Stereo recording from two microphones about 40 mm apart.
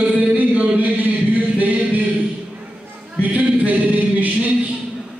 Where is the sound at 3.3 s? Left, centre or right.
Right.